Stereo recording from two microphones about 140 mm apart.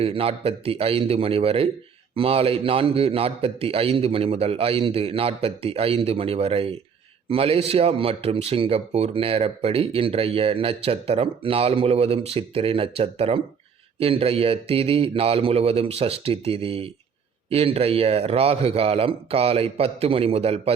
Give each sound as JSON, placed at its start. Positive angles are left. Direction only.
{"t": 0.0, "sound": "a man's voice", "side_deg": -40}